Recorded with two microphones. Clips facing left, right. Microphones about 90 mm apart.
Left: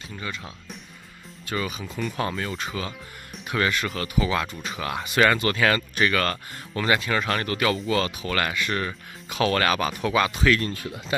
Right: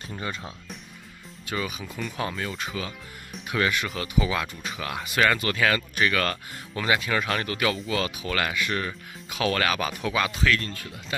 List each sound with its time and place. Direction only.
0.1 s speech: 30° right (ahead or behind)
1.5 s speech: 5° right (ahead or behind)
10.7 s speech: 20° left (ahead or behind)